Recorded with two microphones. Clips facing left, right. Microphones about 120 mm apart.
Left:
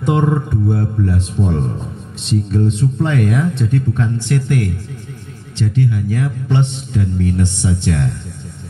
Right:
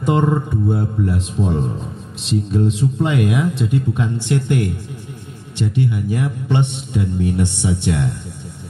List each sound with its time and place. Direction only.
0.0 s a man's voice: 5° right (ahead or behind)